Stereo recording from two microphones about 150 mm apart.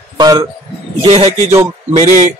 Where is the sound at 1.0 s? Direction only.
40° right (ahead or behind).